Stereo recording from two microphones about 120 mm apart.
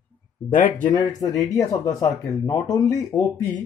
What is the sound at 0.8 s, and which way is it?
Speech, 35° left (ahead or behind).